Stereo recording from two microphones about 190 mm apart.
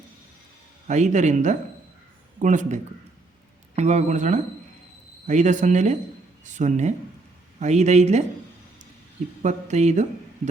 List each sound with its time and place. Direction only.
0.9 s speech: 40° right (ahead or behind)
9.4 s speech: 40° right (ahead or behind)